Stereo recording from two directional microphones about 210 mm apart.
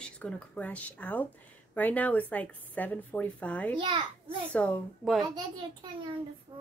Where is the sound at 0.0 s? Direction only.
5° left (ahead or behind).